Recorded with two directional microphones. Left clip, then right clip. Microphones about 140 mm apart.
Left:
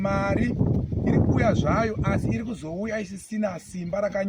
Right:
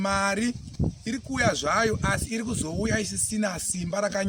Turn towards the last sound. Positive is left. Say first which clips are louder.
# left 1 dB
turn(degrees=-25)  # may be behind; listen again after turning